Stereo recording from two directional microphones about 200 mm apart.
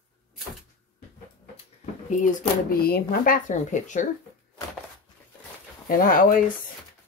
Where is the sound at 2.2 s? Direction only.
45° left (ahead or behind).